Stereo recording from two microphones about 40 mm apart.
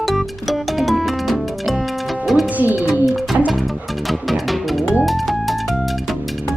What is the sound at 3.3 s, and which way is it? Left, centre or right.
Music, right.